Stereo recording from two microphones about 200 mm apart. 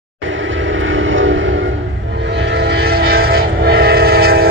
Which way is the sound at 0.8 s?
75° right (ahead or behind).